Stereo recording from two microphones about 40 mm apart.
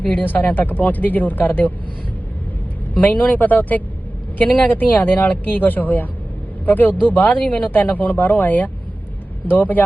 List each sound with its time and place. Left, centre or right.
0.0 s speech: left
2.9 s a woman's voice: left
4.7 s speech: left
7.3 s speech: left
7.7 s speech: left